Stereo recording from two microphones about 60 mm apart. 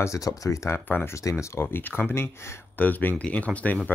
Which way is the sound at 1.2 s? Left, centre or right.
Left.